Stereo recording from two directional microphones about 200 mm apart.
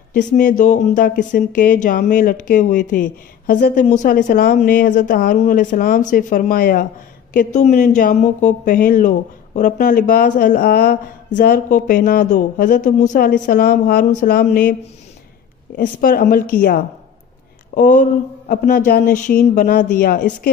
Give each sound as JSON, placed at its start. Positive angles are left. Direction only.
{"t": 0.1, "sound": "speech", "side_deg": 40}
{"t": 7.3, "sound": "speech", "side_deg": 35}
{"t": 16.0, "sound": "speech", "side_deg": 45}
{"t": 17.7, "sound": "speech", "side_deg": 40}